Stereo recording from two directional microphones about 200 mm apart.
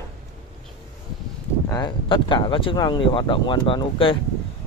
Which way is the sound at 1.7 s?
20° left (ahead or behind).